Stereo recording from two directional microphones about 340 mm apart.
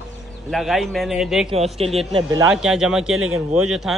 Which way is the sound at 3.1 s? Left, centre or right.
Right.